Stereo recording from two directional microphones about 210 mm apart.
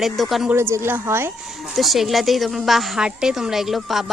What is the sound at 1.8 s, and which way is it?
A woman's voice, centre (ahead or behind).